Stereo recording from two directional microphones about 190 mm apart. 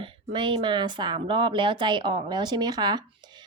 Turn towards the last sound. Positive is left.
turn(degrees=-25)  # may be behind; listen again after turning